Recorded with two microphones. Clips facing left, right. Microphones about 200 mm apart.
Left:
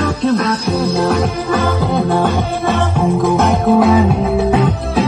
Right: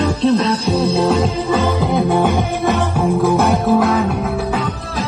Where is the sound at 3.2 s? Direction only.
Centre (ahead or behind).